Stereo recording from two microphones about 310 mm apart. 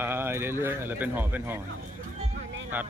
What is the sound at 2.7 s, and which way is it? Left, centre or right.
Vehicle, centre.